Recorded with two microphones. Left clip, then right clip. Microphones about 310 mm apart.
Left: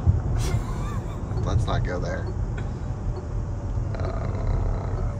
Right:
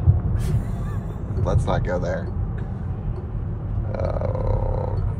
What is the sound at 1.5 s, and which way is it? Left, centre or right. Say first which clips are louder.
Speech: right 6 dB; right.